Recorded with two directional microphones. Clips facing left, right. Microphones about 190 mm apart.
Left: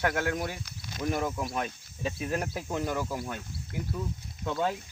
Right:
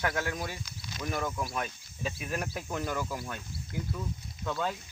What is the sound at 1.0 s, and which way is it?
Speech, 30° left (ahead or behind).